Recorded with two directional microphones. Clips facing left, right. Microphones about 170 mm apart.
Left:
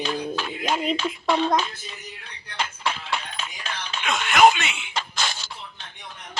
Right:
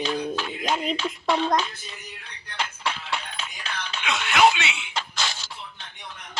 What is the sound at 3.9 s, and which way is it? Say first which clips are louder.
Music: left 2 dB; 45° left (ahead or behind).